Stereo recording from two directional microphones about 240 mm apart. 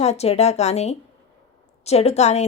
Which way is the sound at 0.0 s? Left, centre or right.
Left.